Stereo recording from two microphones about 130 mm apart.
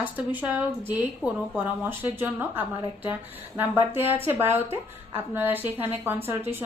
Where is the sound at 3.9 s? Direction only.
15° right (ahead or behind).